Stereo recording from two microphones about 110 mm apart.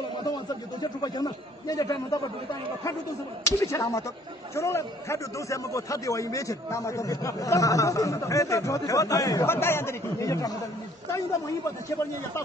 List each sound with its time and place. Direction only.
0.7 s a man's voice: 40° left (ahead or behind)
3.4 s a man's voice: 30° left (ahead or behind)